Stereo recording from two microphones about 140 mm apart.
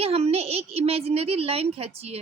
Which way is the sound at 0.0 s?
45° right (ahead or behind).